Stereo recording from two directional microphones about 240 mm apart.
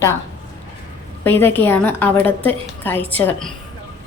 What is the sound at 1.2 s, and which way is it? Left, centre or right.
A woman's voice, centre.